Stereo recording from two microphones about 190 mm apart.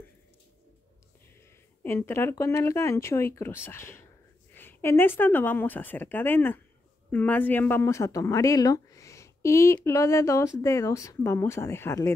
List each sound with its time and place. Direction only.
1.8 s speech: 10° left (ahead or behind)